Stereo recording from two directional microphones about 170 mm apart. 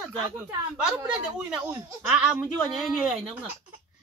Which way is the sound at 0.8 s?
5° right (ahead or behind).